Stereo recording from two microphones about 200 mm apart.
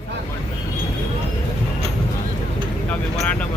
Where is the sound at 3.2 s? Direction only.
5° left (ahead or behind).